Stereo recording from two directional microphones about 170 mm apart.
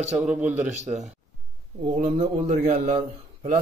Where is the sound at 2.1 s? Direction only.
40° right (ahead or behind).